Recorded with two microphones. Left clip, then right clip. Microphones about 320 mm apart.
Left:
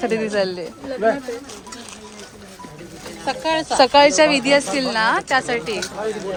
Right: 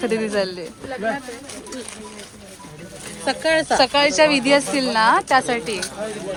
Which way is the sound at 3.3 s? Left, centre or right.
Right.